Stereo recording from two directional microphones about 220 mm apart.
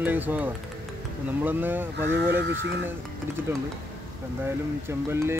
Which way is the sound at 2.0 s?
55° right (ahead or behind).